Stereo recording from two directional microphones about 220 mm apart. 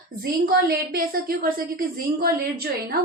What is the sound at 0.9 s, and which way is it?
A woman's voice, 40° right (ahead or behind).